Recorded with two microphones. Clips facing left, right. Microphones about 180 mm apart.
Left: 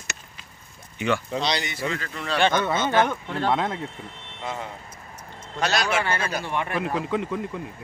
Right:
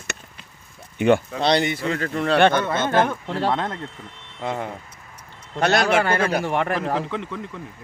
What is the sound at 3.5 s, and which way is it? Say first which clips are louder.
Speech: left 1 dB; 5° left (ahead or behind).